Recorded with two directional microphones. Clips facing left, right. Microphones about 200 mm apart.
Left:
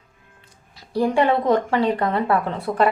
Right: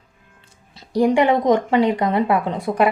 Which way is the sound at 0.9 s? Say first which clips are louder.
Right 3 dB; 15° right (ahead or behind).